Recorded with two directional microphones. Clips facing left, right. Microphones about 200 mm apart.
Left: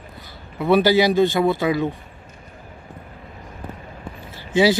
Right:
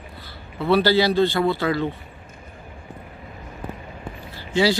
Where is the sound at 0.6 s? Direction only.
15° left (ahead or behind).